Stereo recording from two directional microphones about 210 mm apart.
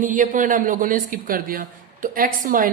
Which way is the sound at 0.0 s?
40° right (ahead or behind).